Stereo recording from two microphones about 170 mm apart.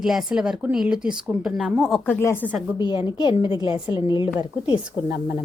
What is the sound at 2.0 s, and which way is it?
Speech, 15° left (ahead or behind).